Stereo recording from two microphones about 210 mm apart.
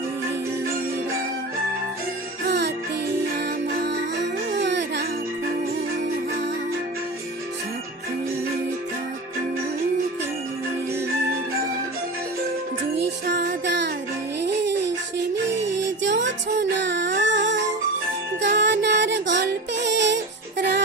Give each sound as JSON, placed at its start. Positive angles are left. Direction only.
{"t": 2.5, "sound": "music", "side_deg": -55}
{"t": 13.2, "sound": "a sound", "side_deg": -50}
{"t": 14.4, "sound": "music", "side_deg": -55}